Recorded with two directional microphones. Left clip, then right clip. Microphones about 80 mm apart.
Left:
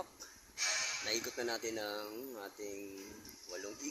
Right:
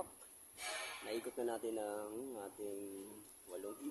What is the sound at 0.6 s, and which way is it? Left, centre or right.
Music, right.